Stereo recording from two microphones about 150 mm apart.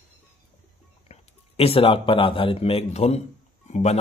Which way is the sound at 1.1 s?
40° left (ahead or behind).